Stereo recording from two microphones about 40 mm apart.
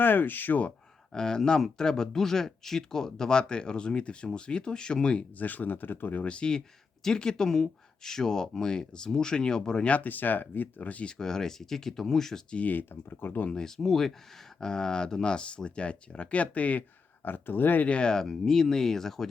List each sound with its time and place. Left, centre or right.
0.0 s speech: left
1.1 s speech: centre
5.4 s speech: left
6.2 s speech: left
9.8 s speech: left
10.1 s speech: left
11.0 s speech: centre
12.6 s speech: left
13.5 s speech: centre; by 16.8 s left
17.2 s speech: left
17.8 s speech: left
18.1 s speech: centre